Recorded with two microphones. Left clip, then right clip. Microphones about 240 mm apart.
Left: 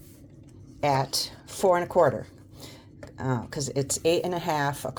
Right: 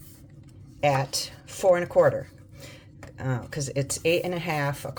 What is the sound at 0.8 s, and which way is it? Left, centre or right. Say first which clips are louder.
Speech: right 1 dB; left.